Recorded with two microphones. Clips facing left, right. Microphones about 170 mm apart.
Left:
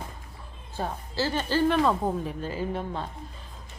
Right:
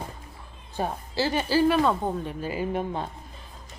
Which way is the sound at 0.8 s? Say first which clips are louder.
Right 2 dB; 15° right (ahead or behind).